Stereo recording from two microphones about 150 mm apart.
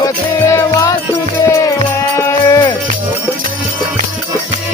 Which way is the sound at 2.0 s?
20° left (ahead or behind).